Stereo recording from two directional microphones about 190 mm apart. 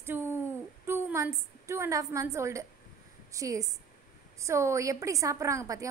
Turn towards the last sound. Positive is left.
turn(degrees=-15)  # may be behind; listen again after turning